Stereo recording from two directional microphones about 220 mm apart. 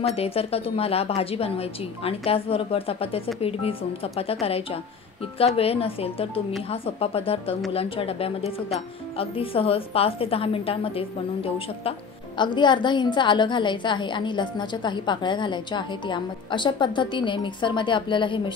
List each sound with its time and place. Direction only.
0.1 s a woman's voice: 25° left (ahead or behind)